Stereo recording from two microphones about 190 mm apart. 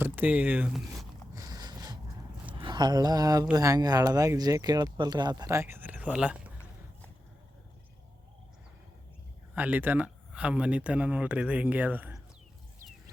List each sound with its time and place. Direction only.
0.0 s speech: 10° right (ahead or behind)
1.4 s a sound: 20° right (ahead or behind)
2.6 s speech: 25° right (ahead or behind); by 6.5 s 5° right (ahead or behind)
9.6 s speech: 10° right (ahead or behind)